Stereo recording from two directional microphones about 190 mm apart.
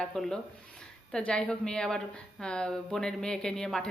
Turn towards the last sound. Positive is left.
turn(degrees=5)  # may be behind; listen again after turning